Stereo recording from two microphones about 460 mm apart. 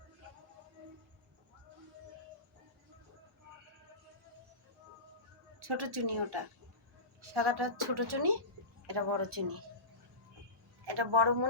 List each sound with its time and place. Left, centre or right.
5.5 s a woman's voice: right
10.8 s a woman's voice: right